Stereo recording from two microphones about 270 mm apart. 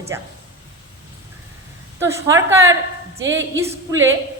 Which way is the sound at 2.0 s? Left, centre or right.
Centre.